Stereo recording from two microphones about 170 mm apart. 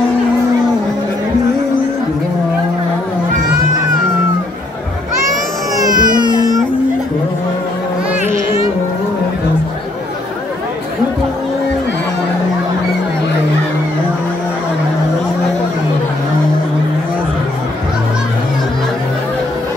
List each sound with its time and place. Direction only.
5.8 s music: 25° right (ahead or behind)